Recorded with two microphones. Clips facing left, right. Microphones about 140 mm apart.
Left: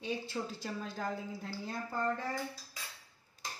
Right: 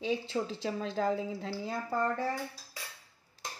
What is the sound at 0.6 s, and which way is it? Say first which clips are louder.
Speech: right 7 dB; 90° right.